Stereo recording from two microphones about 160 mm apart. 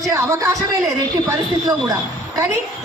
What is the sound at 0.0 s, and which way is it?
A woman's voice, 20° right (ahead or behind).